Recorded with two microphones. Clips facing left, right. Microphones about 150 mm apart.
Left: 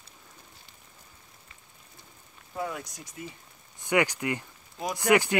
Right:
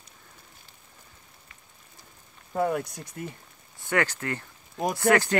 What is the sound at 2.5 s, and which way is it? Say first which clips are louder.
Speech: right 8 dB; 55° right (ahead or behind).